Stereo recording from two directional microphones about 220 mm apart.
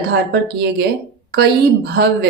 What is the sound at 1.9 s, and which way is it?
Speech, 45° right (ahead or behind).